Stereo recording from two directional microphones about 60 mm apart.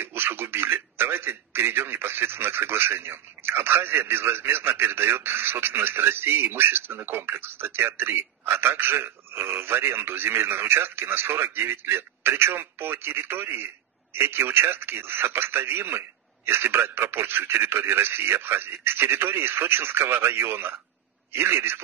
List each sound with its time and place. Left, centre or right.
0.0 s a man's voice: right